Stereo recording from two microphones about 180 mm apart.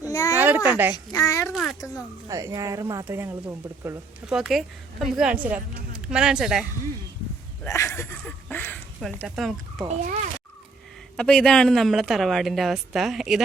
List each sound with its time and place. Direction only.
0.0 s a sound: 20° left (ahead or behind)
0.3 s a sound: 10° right (ahead or behind)
0.9 s a child's voice: 20° left (ahead or behind)
2.2 s speech: 20° right (ahead or behind)
3.8 s a woman's voice: 5° right (ahead or behind)
7.6 s speech: 15° left (ahead or behind); by 9.8 s centre (ahead or behind)
11.2 s a woman's voice: 5° left (ahead or behind)